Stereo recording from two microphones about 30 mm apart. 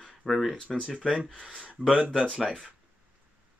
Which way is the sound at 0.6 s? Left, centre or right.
Left.